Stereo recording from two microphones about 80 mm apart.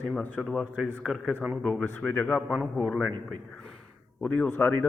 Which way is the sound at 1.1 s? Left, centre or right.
Centre.